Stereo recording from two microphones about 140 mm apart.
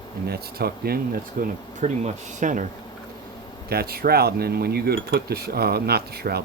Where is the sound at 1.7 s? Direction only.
60° right (ahead or behind).